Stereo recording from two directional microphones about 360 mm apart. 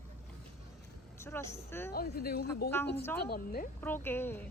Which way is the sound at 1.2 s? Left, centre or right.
Centre.